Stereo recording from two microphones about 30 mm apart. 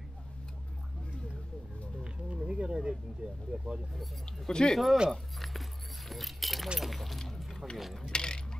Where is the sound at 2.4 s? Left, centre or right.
Right.